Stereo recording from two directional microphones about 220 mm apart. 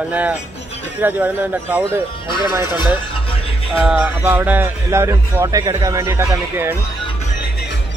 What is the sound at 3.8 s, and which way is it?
Speech, 5° right (ahead or behind).